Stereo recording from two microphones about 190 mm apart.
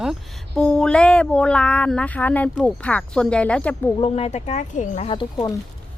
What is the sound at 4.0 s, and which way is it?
Speech, 35° left (ahead or behind).